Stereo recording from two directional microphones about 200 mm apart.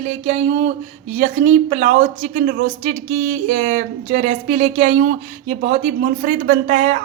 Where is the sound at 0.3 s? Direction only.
35° right (ahead or behind).